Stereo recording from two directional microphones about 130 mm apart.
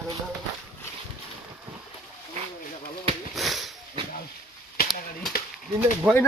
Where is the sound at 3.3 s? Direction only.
Centre (ahead or behind).